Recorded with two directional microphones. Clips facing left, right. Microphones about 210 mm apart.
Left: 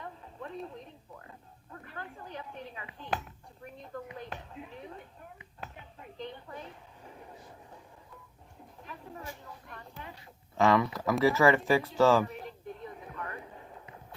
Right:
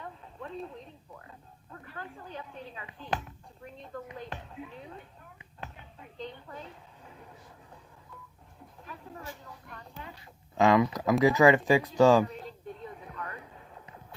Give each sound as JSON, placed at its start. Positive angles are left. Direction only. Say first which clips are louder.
{"t": 10.6, "sound": "speech", "louder": "right 2 dB", "side_deg": -15}